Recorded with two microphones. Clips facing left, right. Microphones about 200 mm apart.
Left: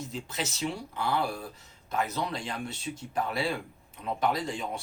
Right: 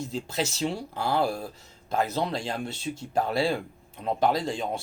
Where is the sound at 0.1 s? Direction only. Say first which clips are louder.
Right 5 dB; 35° right (ahead or behind).